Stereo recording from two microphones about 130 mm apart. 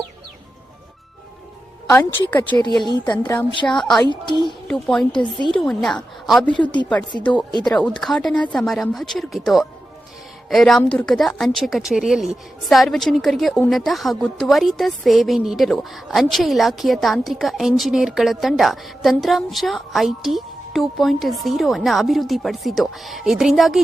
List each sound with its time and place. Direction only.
1.9 s speech: 15° left (ahead or behind)
3.7 s a woman's voice: 5° left (ahead or behind)
4.1 s speech: 35° left (ahead or behind)
4.7 s a woman's voice: 5° left (ahead or behind)
6.5 s speech: 35° left (ahead or behind)
7.2 s a woman's voice: 10° left (ahead or behind)